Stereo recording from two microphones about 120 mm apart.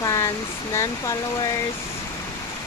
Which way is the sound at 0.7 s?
25° left (ahead or behind).